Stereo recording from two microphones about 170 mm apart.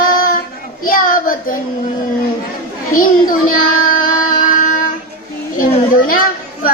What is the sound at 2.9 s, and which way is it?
Child singing, 55° left (ahead or behind).